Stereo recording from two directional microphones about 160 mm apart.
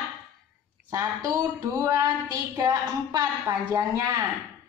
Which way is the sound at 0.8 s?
20° right (ahead or behind).